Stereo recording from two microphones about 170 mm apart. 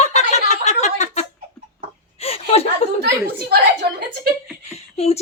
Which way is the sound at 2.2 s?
35° left (ahead or behind).